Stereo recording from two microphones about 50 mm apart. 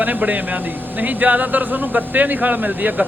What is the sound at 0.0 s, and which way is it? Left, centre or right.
Speech, right.